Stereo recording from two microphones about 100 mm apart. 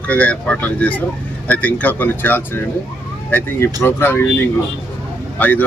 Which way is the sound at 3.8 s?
20° left (ahead or behind).